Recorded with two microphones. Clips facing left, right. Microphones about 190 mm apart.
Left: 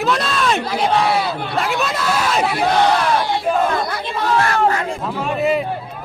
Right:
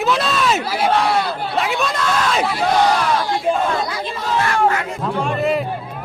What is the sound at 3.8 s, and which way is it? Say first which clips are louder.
Speech: left 2 dB; 60° left (ahead or behind).